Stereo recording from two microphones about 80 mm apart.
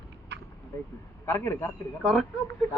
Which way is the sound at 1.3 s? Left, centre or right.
Left.